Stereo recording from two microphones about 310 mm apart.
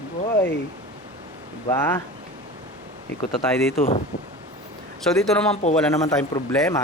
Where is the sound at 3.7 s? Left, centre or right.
Centre.